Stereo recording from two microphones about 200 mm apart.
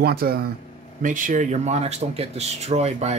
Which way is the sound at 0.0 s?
50° right (ahead or behind).